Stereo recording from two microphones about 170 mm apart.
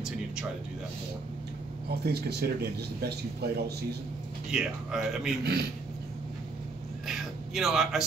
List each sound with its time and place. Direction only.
1.9 s speech: 70° right (ahead or behind)
4.5 s speech: 5° right (ahead or behind)
5.4 s speech: 70° right (ahead or behind)
7.1 s a sound: centre (ahead or behind)